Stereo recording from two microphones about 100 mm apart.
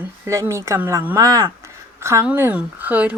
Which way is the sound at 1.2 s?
35° right (ahead or behind).